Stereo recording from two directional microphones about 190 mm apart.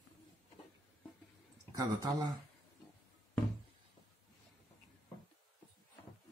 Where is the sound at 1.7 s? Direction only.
20° right (ahead or behind).